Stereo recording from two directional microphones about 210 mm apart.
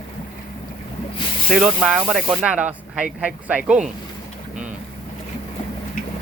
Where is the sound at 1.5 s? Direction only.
Centre (ahead or behind).